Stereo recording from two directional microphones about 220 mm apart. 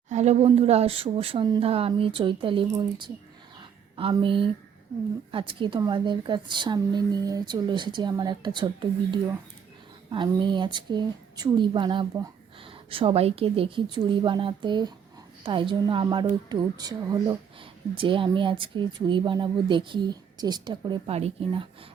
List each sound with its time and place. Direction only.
0.1 s speech: 30° right (ahead or behind)